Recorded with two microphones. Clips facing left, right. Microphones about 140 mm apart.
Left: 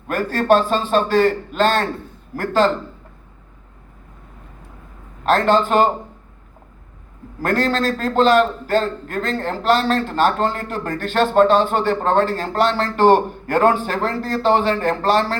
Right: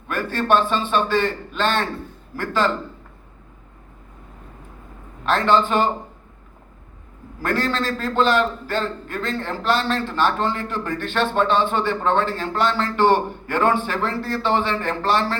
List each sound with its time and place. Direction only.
0.1 s a man's voice: 40° left (ahead or behind)
5.2 s a man's voice: 45° left (ahead or behind)
7.4 s a man's voice: 45° left (ahead or behind)